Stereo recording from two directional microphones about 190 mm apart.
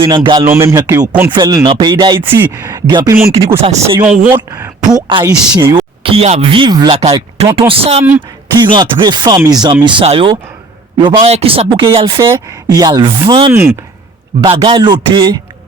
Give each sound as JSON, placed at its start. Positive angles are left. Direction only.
{"t": 0.0, "sound": "a man's voice", "side_deg": -25}
{"t": 3.6, "sound": "speech", "side_deg": -35}
{"t": 3.9, "sound": "a man's voice", "side_deg": -5}
{"t": 4.3, "sound": "speech", "side_deg": -20}
{"t": 13.5, "sound": "a man's voice", "side_deg": -10}
{"t": 14.4, "sound": "speech", "side_deg": -25}